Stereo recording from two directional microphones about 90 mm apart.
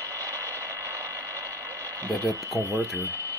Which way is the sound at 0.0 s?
35° right (ahead or behind).